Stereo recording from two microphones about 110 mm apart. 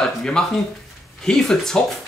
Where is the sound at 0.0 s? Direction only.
5° left (ahead or behind).